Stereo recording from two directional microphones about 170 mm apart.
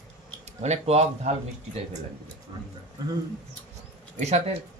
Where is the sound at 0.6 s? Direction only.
40° right (ahead or behind).